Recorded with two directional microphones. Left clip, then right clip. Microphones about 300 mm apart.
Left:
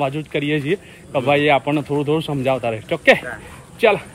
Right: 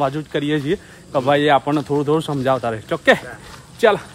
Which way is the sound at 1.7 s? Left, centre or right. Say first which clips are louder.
Right 1 dB; centre.